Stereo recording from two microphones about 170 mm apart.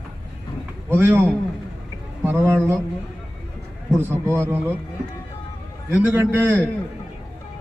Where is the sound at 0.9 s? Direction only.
15° right (ahead or behind).